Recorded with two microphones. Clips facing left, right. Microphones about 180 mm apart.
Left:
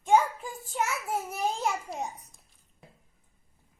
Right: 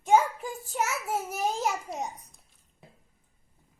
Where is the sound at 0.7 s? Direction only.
5° right (ahead or behind).